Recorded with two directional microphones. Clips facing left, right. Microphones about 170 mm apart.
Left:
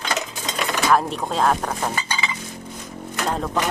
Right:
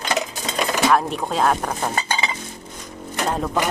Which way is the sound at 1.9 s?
35° right (ahead or behind).